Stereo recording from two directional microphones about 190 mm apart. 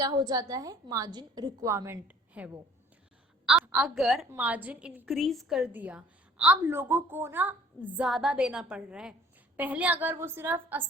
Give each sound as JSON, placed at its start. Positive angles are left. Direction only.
{"t": 0.0, "sound": "a woman's voice", "side_deg": -20}